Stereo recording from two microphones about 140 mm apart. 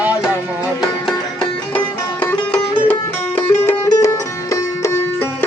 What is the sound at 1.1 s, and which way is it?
Music, 10° left (ahead or behind).